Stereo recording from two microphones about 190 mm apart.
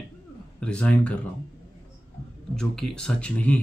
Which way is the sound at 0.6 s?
5° left (ahead or behind).